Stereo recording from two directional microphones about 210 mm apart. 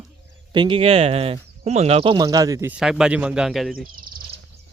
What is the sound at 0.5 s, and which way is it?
Speech, 25° right (ahead or behind).